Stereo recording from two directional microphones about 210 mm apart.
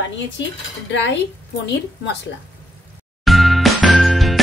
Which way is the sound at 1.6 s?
55° left (ahead or behind).